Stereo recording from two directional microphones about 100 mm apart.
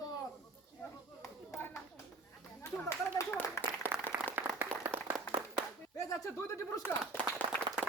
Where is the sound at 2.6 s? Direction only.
30° left (ahead or behind).